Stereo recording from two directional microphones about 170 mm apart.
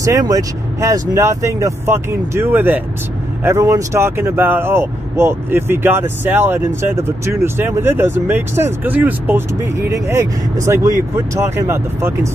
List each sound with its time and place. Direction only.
0.0 s speech: 20° right (ahead or behind)